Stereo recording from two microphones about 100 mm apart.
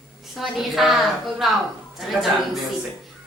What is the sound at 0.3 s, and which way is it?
A woman's voice, centre (ahead or behind).